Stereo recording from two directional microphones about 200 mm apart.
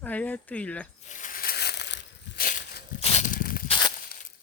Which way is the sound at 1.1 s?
40° left (ahead or behind).